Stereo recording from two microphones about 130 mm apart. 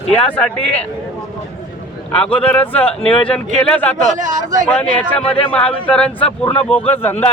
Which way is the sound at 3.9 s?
75° right (ahead or behind).